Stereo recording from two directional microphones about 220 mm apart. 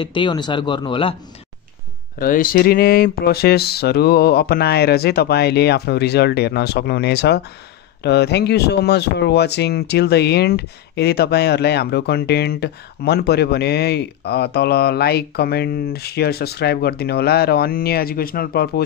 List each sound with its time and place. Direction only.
0.0 s speech: 20° left (ahead or behind)
2.1 s speech: 40° left (ahead or behind)